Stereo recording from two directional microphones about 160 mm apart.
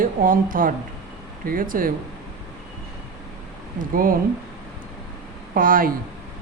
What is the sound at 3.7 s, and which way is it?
Speech, 60° right (ahead or behind).